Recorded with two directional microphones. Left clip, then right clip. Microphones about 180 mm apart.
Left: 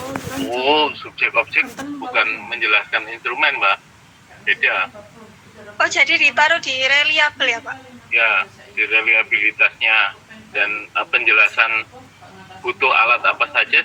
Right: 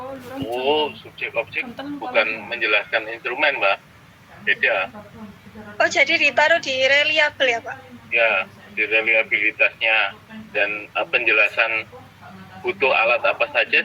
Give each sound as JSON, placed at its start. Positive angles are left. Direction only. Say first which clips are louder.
{"t": 0.4, "sound": "speech", "louder": "left 4 dB", "side_deg": 20}
{"t": 2.0, "sound": "a woman's voice", "louder": "left 2 dB", "side_deg": -5}